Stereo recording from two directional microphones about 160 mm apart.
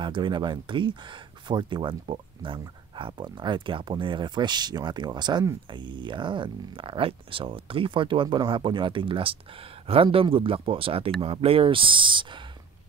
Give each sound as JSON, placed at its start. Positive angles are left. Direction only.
{"t": 0.0, "sound": "speech", "side_deg": -30}